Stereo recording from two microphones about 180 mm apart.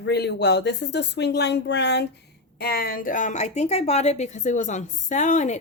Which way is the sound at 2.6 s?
55° left (ahead or behind).